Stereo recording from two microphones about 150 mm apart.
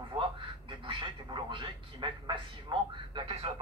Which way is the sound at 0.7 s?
35° right (ahead or behind).